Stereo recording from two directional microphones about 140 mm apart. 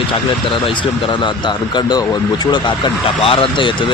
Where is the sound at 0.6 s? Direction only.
35° left (ahead or behind).